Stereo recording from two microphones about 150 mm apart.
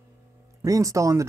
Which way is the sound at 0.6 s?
20° right (ahead or behind).